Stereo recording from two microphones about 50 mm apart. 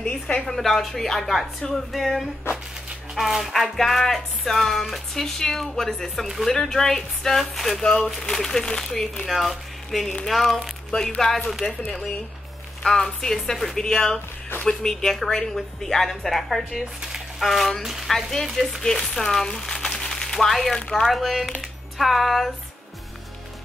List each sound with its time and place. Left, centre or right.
0.0 s a woman's voice: centre
0.6 s speech: centre
3.7 s speech: centre
7.8 s a woman's voice: centre
10.9 s speech: left
11.1 s a woman's voice: centre
12.8 s a woman's voice: centre
18.1 s speech: centre
18.8 s speech: centre